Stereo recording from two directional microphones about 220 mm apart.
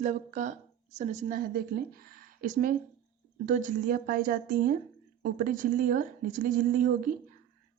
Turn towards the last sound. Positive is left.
turn(degrees=-35)  # may be behind; listen again after turning